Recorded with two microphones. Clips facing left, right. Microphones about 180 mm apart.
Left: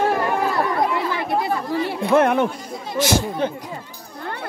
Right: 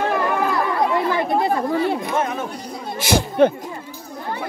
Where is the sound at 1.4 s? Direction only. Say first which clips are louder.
Right 3 dB; 50° right (ahead or behind).